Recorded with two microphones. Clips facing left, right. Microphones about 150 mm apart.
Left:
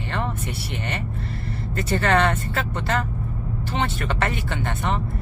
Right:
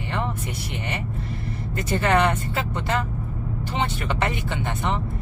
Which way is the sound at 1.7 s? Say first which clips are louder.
Even; 15° right (ahead or behind).